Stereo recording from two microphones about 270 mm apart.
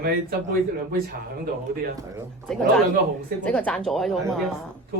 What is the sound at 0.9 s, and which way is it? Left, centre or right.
Speech, right.